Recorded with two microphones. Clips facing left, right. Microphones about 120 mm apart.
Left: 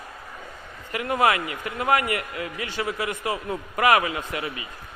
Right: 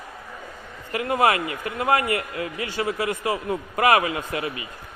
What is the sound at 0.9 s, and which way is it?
A man's voice, 25° right (ahead or behind).